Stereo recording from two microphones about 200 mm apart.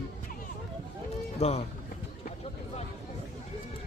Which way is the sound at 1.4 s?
30° left (ahead or behind).